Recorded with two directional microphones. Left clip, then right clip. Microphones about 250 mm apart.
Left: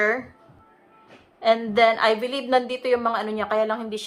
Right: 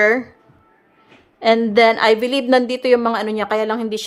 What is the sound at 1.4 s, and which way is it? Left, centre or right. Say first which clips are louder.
A woman's voice: right 5 dB; right.